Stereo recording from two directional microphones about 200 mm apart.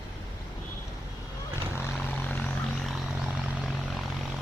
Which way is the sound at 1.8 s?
10° left (ahead or behind).